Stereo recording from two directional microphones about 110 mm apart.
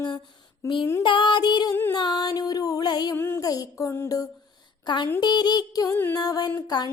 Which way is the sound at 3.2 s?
20° left (ahead or behind).